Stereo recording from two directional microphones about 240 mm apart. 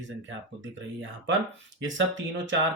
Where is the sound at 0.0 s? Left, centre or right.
Right.